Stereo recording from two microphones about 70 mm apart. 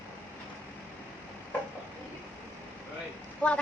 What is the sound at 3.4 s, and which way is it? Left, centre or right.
Speech, centre.